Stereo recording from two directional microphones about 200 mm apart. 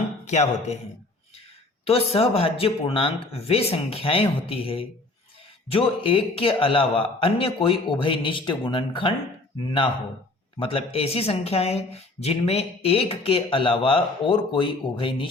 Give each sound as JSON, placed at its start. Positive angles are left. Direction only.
{"t": 0.3, "sound": "speech", "side_deg": 35}
{"t": 1.8, "sound": "speech", "side_deg": 30}
{"t": 10.6, "sound": "speech", "side_deg": 25}